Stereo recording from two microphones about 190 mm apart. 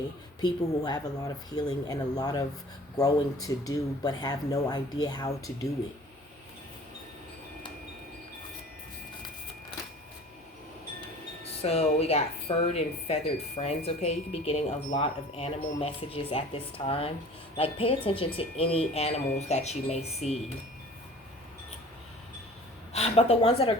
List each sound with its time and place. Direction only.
0.4 s speech: 20° left (ahead or behind)
11.6 s speech: 30° left (ahead or behind)
22.9 s speech: 35° left (ahead or behind)